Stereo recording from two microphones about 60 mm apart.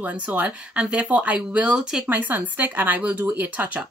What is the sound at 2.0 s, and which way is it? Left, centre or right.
Speech, right.